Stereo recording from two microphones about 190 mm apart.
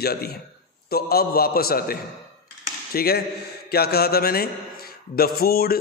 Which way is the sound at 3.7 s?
55° left (ahead or behind).